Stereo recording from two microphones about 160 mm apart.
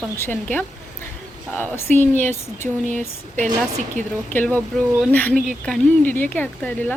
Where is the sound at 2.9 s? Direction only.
50° right (ahead or behind).